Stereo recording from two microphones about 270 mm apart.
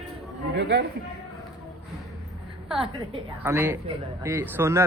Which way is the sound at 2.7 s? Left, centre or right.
Centre.